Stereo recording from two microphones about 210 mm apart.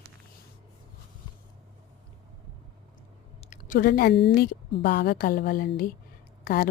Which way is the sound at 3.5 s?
40° left (ahead or behind).